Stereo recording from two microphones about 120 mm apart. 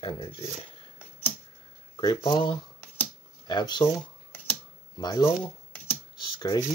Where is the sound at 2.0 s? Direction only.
35° left (ahead or behind).